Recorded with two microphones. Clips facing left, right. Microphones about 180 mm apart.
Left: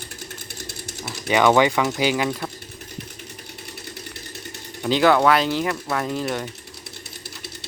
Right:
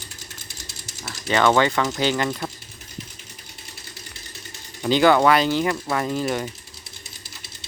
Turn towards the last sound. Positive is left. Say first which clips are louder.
# right 1 dB
turn(degrees=0)  # may be behind; listen again after turning